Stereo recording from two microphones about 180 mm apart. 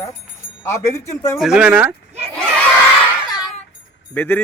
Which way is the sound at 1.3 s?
Centre (ahead or behind).